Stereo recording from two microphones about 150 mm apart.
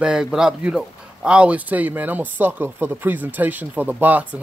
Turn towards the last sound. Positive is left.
turn(degrees=-10)  # may be behind; listen again after turning